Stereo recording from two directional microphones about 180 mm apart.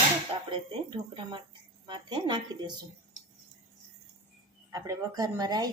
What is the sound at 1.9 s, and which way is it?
Speech, 25° right (ahead or behind).